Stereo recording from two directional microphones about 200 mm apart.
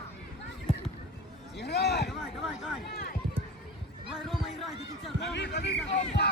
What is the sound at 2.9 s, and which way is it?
Run, 55° left (ahead or behind).